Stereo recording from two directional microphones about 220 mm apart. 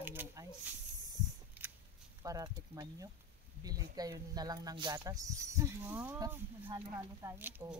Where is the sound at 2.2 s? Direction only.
15° right (ahead or behind).